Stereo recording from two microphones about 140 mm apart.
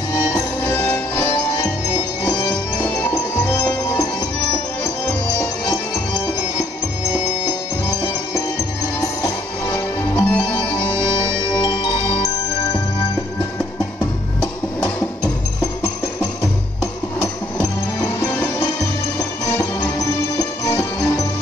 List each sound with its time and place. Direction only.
0.1 s music: 20° left (ahead or behind)
2.8 s music: 15° left (ahead or behind)
9.0 s music: 20° left (ahead or behind)
16.8 s music: 20° left (ahead or behind)